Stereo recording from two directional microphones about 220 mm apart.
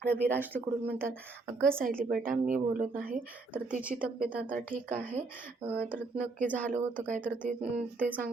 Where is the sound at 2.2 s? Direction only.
35° right (ahead or behind).